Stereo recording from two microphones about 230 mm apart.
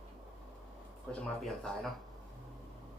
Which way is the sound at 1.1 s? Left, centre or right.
Centre.